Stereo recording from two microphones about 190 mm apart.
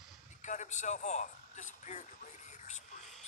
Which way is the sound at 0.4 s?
40° left (ahead or behind).